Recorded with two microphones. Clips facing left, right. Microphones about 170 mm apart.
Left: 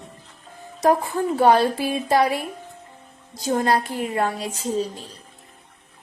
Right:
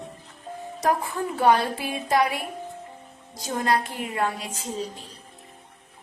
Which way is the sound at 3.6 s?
35° left (ahead or behind).